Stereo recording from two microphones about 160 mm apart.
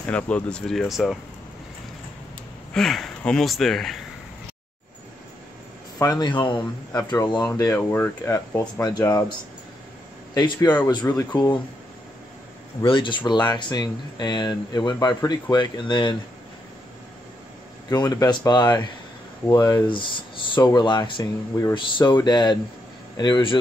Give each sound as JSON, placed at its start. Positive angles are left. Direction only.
{"t": 0.1, "sound": "speech", "side_deg": 5}
{"t": 2.7, "sound": "speech", "side_deg": 0}
{"t": 5.9, "sound": "speech", "side_deg": 25}
{"t": 10.3, "sound": "speech", "side_deg": 25}
{"t": 12.8, "sound": "speech", "side_deg": 30}
{"t": 17.8, "sound": "speech", "side_deg": 25}
{"t": 21.7, "sound": "speech", "side_deg": 30}